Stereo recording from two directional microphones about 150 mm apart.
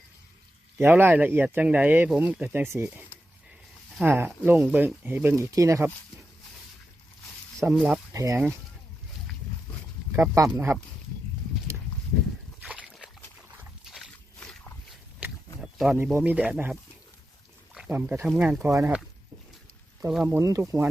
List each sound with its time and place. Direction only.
0.8 s speech: 15° right (ahead or behind)
7.6 s speech: 10° right (ahead or behind)
8.1 s speech: 20° right (ahead or behind)
10.1 s speech: 20° right (ahead or behind)
12.6 s a sound: 10° right (ahead or behind)
14.3 s a sound: 10° left (ahead or behind)
15.6 s a sound: centre (ahead or behind)
16.1 s speech: 10° right (ahead or behind)
17.7 s speech: 10° right (ahead or behind)
18.3 s speech: 5° right (ahead or behind)
18.6 s speech: 15° right (ahead or behind)
20.2 s speech: 15° right (ahead or behind)